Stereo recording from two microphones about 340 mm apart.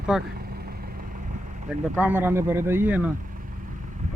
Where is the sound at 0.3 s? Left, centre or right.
Right.